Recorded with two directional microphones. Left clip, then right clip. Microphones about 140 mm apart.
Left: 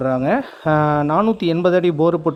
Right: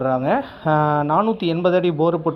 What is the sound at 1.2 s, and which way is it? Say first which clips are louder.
Speech: left 2 dB; 70° left (ahead or behind).